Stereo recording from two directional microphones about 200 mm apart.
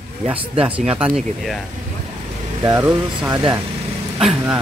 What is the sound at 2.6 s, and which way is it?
Speech, 15° right (ahead or behind).